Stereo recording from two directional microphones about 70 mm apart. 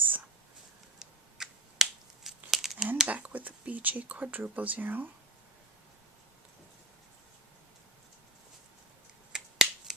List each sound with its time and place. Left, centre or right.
0.9 s a sound: centre
3.1 s speech: right
9.3 s finger snapping: centre